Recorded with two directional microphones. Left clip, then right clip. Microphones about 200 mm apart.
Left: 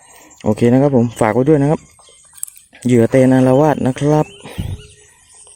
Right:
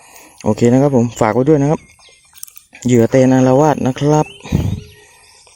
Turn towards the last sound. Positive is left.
turn(degrees=0)  # may be behind; listen again after turning